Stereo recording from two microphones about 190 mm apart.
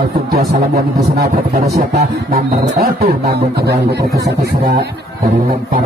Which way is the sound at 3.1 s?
55° right (ahead or behind).